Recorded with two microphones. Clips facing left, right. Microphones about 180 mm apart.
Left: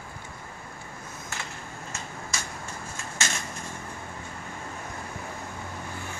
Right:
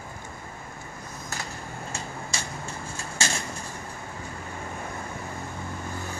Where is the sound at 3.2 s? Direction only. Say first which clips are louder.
Right 3 dB; 30° right (ahead or behind).